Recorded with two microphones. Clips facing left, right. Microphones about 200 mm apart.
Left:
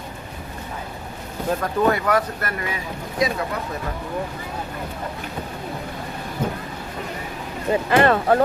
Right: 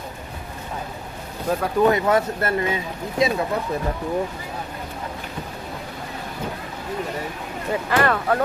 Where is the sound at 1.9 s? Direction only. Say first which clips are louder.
Right 2 dB; 25° right (ahead or behind).